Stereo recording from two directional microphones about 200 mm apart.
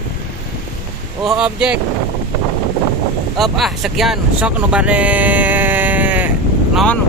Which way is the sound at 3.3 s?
Centre (ahead or behind).